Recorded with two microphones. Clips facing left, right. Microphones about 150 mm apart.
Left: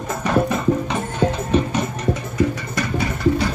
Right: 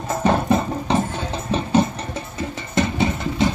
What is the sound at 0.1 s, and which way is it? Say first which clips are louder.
Music: right 1 dB; 30° right (ahead or behind).